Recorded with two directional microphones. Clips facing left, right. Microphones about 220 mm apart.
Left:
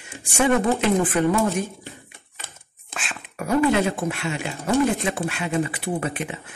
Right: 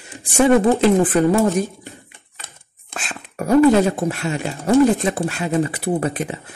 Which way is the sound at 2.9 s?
40° right (ahead or behind).